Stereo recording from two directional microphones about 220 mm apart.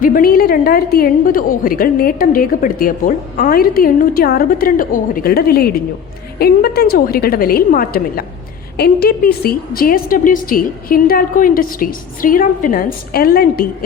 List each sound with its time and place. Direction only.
0.0 s a woman's voice: 40° left (ahead or behind)